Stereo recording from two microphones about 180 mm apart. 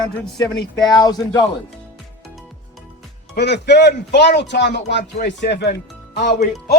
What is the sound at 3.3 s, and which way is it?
Speech, 70° left (ahead or behind).